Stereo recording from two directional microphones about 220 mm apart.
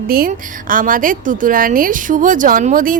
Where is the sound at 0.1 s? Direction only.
40° right (ahead or behind).